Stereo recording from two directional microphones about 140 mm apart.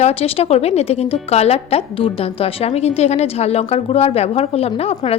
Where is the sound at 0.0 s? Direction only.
45° left (ahead or behind).